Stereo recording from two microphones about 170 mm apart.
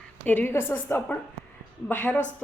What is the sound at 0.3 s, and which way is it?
A woman's voice, 10° left (ahead or behind).